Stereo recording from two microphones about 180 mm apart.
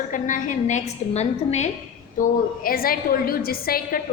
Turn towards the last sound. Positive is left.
turn(degrees=55)  # may be behind; listen again after turning